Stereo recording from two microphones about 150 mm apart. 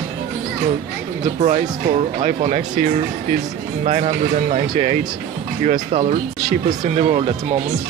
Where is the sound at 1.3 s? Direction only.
45° right (ahead or behind).